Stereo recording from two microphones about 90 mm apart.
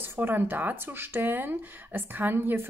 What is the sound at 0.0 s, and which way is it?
Speech, 25° right (ahead or behind).